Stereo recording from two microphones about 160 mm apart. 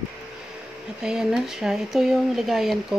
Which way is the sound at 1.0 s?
5° right (ahead or behind).